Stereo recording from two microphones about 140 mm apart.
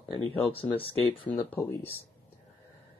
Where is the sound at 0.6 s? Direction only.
40° left (ahead or behind).